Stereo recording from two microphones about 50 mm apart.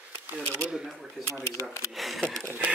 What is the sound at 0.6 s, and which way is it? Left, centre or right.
Speech, centre.